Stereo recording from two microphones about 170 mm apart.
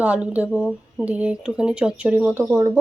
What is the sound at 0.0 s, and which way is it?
Speech, 10° right (ahead or behind).